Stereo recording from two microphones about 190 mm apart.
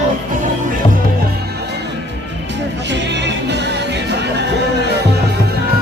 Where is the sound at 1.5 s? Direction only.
60° right (ahead or behind).